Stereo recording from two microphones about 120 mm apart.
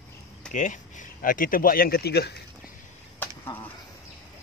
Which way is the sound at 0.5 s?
90° left.